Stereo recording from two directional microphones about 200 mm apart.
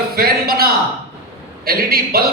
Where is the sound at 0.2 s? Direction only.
50° right (ahead or behind).